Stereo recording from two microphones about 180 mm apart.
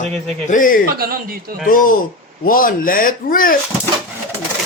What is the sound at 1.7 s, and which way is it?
Speech, 50° left (ahead or behind).